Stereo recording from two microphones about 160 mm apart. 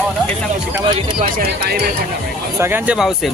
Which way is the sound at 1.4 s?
80° right.